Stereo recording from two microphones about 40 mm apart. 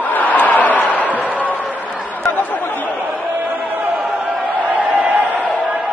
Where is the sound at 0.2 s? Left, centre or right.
Left.